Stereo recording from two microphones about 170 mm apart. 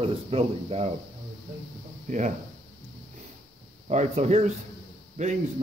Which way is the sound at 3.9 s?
40° right (ahead or behind).